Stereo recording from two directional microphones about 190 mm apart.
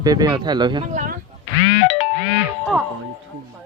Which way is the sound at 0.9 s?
45° right (ahead or behind).